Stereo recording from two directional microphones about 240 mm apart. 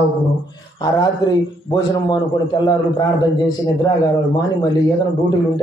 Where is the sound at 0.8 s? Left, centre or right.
Centre.